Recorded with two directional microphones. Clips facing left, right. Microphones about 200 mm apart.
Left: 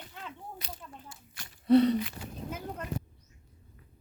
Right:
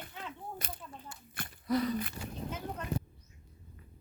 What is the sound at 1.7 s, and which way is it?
Speech, 30° left (ahead or behind).